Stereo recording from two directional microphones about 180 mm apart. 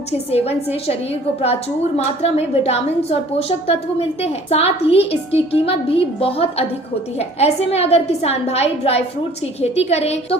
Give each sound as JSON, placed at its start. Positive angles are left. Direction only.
{"t": 0.3, "sound": "a woman's voice", "side_deg": 35}
{"t": 2.0, "sound": "a woman's voice", "side_deg": 35}